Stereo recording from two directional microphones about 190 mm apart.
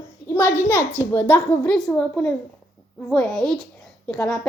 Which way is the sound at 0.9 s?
10° left (ahead or behind).